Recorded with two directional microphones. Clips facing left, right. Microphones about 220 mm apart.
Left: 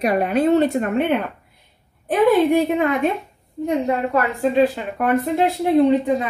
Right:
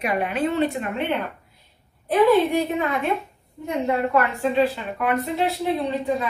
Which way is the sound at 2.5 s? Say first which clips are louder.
Left 5 dB; 50° left (ahead or behind).